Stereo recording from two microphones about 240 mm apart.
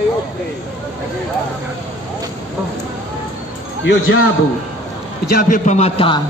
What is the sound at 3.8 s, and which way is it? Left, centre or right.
Speech, left.